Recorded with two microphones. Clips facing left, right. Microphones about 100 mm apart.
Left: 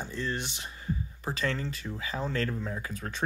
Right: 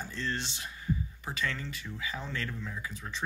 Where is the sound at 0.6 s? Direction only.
35° left (ahead or behind).